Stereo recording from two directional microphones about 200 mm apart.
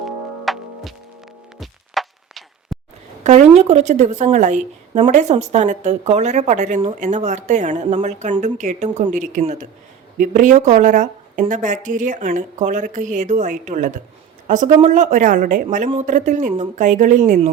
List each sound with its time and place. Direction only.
0.0 s music: centre (ahead or behind)
3.2 s speech: 35° right (ahead or behind)